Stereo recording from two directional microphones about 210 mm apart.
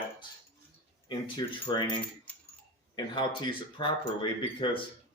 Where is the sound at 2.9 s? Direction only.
20° left (ahead or behind).